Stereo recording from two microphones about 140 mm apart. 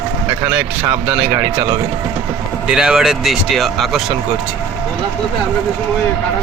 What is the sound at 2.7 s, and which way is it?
Speech, 5° right (ahead or behind).